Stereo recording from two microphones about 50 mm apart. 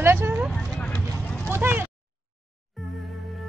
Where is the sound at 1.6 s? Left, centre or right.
Right.